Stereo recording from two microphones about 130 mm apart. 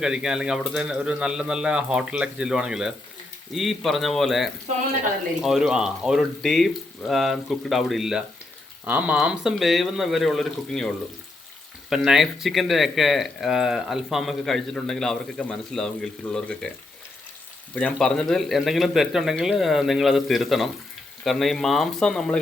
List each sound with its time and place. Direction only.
0.0 s speech: 5° right (ahead or behind)
18.0 s speech: 5° left (ahead or behind)